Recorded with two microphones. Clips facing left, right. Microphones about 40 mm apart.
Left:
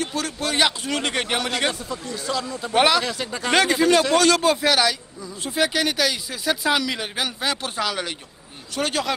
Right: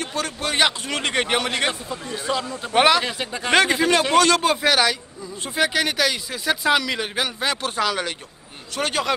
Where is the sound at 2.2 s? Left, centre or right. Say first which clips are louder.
Right 2 dB; right.